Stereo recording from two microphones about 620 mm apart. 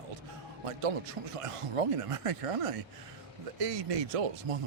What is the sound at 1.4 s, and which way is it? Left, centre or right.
Speech, right.